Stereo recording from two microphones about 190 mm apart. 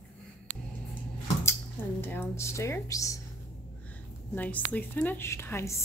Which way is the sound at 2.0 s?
10° left (ahead or behind).